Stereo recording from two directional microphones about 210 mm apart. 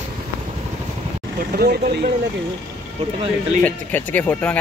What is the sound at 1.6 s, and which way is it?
Speech, 50° right (ahead or behind).